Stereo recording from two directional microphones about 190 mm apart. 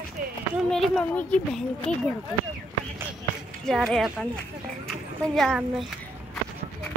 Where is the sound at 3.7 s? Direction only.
Centre (ahead or behind).